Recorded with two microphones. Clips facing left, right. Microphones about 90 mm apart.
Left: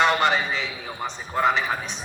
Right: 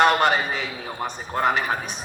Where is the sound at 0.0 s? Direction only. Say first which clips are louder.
Right 2 dB; 50° right (ahead or behind).